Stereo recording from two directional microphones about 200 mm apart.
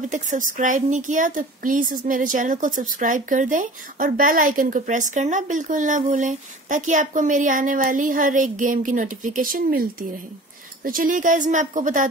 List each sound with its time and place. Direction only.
0.1 s a woman's voice: 40° right (ahead or behind)